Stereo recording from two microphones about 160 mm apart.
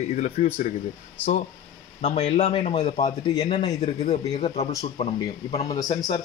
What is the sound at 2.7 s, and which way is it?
A man's voice, 25° left (ahead or behind).